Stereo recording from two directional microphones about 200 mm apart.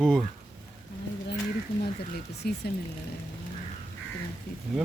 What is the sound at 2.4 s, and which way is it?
Speech, 55° left (ahead or behind).